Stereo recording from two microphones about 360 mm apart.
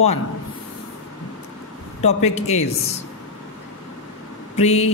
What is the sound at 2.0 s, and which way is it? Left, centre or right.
Speech, centre.